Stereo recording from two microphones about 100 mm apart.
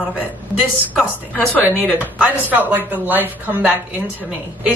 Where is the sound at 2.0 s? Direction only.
15° right (ahead or behind).